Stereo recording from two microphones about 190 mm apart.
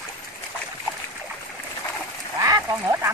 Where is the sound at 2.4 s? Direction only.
15° right (ahead or behind).